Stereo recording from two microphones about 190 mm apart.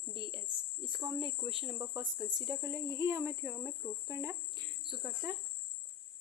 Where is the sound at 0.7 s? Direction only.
25° right (ahead or behind).